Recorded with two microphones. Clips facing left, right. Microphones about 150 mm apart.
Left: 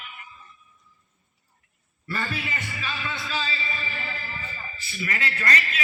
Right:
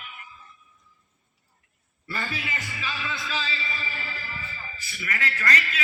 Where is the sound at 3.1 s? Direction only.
40° left (ahead or behind).